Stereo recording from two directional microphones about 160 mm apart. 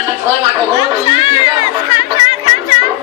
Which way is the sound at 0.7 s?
30° left (ahead or behind).